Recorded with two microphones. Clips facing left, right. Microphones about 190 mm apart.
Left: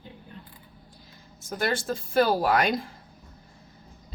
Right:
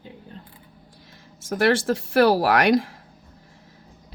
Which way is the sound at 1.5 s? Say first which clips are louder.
Right 8 dB; 80° right.